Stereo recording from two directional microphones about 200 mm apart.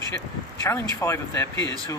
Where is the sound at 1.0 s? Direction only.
15° left (ahead or behind).